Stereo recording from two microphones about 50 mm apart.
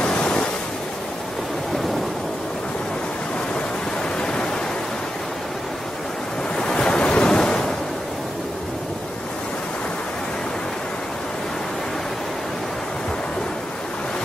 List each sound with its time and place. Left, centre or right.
0.0 s waves: centre
4.2 s pink noise: centre
6.5 s waves: centre